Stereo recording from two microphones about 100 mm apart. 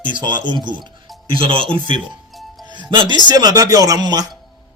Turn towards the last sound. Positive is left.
turn(degrees=-40)  # may be behind; listen again after turning